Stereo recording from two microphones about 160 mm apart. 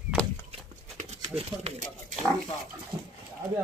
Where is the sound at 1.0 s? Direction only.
45° right (ahead or behind).